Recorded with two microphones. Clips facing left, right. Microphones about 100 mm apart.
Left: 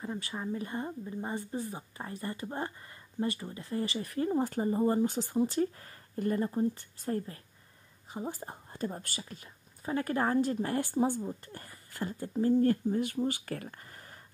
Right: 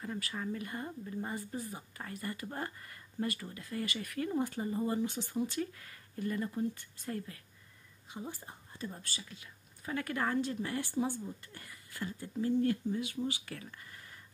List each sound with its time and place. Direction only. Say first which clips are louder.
0.0 s a woman's voice: left 2 dB; 20° left (ahead or behind); by 14.2 s 40° left (ahead or behind)